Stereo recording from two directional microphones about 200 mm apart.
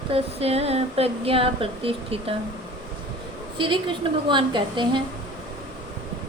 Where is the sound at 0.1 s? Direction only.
30° right (ahead or behind).